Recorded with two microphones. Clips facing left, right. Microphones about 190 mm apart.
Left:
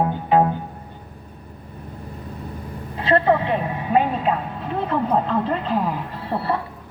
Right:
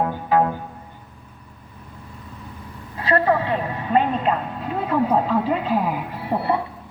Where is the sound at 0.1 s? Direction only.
25° left (ahead or behind).